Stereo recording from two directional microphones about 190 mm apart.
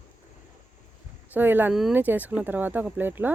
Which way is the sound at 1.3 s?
10° right (ahead or behind).